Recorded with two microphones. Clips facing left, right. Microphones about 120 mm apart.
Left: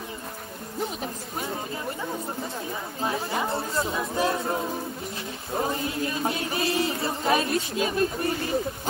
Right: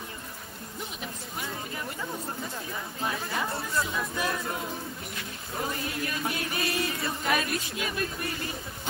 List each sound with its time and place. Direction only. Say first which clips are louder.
1.0 s speech: left 5 dB; 30° left (ahead or behind)
3.0 s music: left 4 dB; 25° left (ahead or behind)